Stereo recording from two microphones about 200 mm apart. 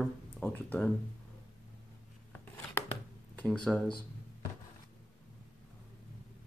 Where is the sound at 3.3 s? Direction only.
5° left (ahead or behind).